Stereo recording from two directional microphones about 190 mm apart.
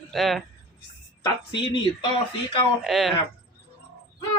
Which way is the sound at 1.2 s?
25° left (ahead or behind).